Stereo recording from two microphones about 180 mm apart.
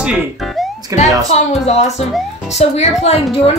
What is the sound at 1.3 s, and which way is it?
Speech, 35° left (ahead or behind).